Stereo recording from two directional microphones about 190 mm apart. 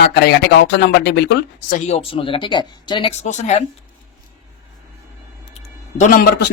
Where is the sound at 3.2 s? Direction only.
35° left (ahead or behind).